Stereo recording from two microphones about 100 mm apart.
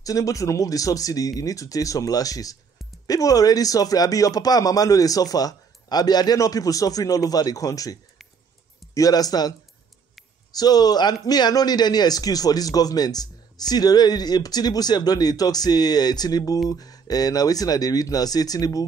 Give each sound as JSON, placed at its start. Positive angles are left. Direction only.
{"t": 0.0, "sound": "speech", "side_deg": 35}